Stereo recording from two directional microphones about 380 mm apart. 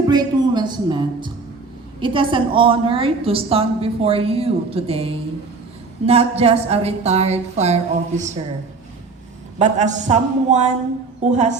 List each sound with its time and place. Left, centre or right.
0.1 s a woman's voice: centre
9.6 s a woman's voice: centre